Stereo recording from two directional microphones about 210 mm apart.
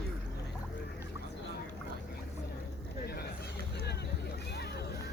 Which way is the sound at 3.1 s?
50° left (ahead or behind).